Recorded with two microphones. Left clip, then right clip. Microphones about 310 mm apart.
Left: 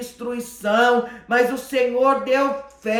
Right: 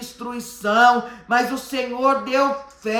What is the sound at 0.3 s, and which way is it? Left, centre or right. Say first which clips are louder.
Speech: left 1 dB; centre.